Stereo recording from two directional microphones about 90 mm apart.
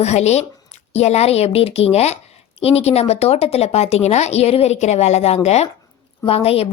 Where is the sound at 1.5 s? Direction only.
90° left.